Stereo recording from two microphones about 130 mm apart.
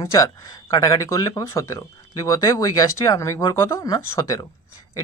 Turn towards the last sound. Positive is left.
turn(degrees=25)  # may be behind; listen again after turning